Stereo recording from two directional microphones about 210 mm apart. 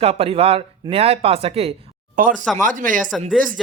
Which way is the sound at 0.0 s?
30° right (ahead or behind).